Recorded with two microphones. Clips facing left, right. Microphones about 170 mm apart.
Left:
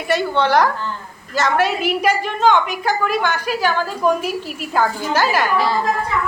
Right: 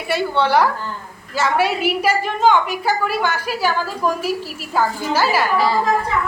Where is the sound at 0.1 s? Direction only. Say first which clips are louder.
Left 1 dB; 10° right (ahead or behind).